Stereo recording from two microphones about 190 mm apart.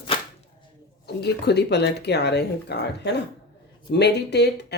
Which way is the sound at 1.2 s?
60° left (ahead or behind).